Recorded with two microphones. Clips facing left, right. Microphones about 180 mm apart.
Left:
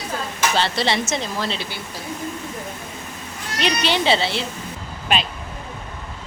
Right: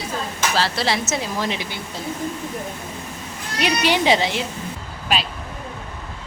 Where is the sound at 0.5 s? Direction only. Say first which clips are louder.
Even; centre (ahead or behind).